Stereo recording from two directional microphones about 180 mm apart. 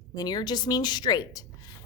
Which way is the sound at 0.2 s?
20° left (ahead or behind).